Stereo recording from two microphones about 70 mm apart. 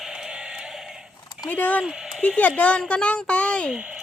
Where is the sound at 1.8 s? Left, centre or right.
Centre.